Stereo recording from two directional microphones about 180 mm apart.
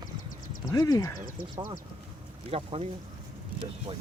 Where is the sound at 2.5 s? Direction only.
35° right (ahead or behind).